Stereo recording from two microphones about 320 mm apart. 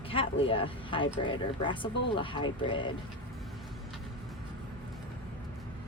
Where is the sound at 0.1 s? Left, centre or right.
Centre.